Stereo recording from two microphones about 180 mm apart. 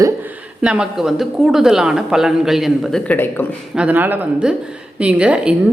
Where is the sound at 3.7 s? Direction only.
5° right (ahead or behind).